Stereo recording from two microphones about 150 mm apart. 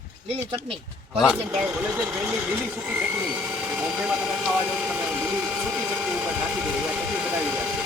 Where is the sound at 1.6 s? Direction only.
15° right (ahead or behind).